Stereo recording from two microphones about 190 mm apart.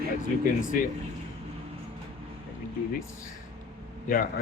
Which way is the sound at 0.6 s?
45° left (ahead or behind).